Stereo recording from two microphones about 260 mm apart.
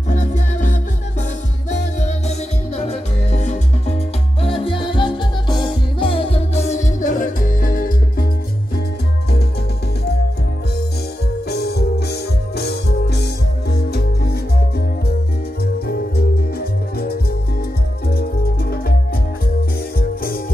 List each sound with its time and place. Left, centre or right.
0.1 s music: left
11.4 s music: left
15.6 s music: left